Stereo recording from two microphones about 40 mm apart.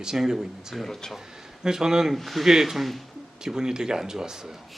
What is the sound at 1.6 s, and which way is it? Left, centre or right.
Speech, centre.